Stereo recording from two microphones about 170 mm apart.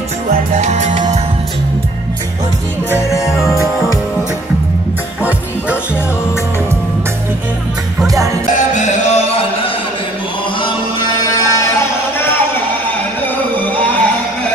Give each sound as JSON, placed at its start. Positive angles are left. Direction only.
{"t": 0.6, "sound": "music", "side_deg": -45}
{"t": 8.7, "sound": "music", "side_deg": 45}
{"t": 10.6, "sound": "music", "side_deg": 25}